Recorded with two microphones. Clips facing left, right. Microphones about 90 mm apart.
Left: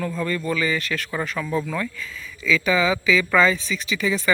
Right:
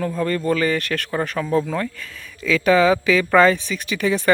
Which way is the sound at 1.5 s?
40° right (ahead or behind).